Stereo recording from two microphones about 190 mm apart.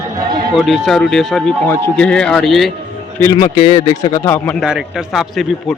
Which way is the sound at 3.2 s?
15° left (ahead or behind).